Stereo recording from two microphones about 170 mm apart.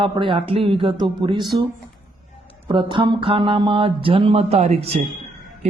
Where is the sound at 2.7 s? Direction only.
30° right (ahead or behind).